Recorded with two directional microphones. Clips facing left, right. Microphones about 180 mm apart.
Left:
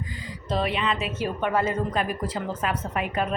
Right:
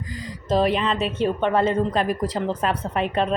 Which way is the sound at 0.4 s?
40° right (ahead or behind).